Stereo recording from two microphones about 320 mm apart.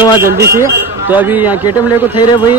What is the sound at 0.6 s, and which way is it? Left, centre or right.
Speech, centre.